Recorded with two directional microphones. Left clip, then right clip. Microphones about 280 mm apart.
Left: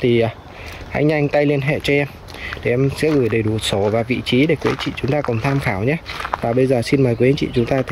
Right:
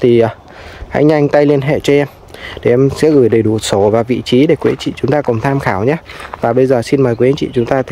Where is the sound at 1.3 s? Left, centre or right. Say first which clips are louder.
Right 7 dB; right.